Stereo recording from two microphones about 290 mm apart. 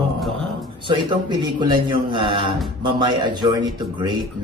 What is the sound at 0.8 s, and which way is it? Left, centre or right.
Speech, centre.